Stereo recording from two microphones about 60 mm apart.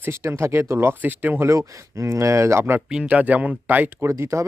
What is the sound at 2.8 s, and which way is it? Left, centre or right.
Speech, centre.